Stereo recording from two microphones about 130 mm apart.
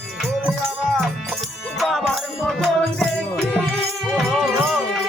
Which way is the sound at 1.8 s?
Centre (ahead or behind).